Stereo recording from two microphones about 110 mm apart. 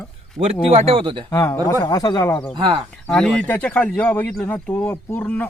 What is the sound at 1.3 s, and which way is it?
Speech, 30° left (ahead or behind).